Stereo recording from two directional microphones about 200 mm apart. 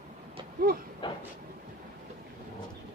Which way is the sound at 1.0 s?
25° left (ahead or behind).